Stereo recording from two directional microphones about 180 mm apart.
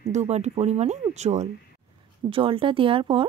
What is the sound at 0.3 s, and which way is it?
Speech, 40° right (ahead or behind).